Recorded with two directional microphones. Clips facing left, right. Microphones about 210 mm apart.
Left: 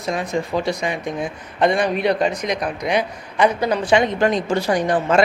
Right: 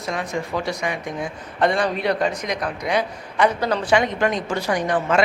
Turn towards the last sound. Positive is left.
turn(degrees=35)  # may be behind; listen again after turning